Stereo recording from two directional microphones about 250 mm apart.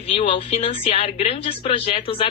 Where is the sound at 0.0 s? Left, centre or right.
Left.